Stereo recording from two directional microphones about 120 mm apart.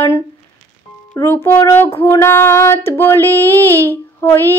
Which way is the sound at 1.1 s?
20° left (ahead or behind).